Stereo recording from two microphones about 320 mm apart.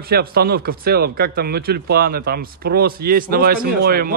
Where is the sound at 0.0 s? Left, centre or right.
Right.